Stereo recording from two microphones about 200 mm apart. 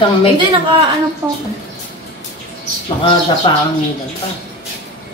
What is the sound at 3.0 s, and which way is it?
Speech, 25° left (ahead or behind).